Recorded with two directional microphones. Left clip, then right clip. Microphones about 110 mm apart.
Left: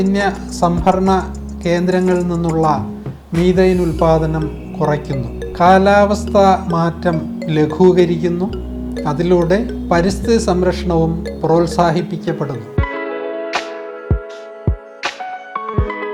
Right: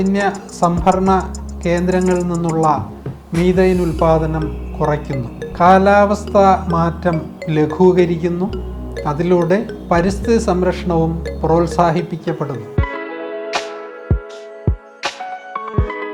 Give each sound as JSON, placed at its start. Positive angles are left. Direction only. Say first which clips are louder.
{"t": 0.0, "sound": "speech", "louder": "left 1 dB", "side_deg": 25}
{"t": 3.8, "sound": "speech", "louder": "left 1 dB", "side_deg": 0}
{"t": 4.0, "sound": "speech", "louder": "even", "side_deg": 25}
{"t": 12.7, "sound": "music", "louder": "left 2 dB", "side_deg": 0}
{"t": 15.0, "sound": "music", "louder": "left 1 dB", "side_deg": -5}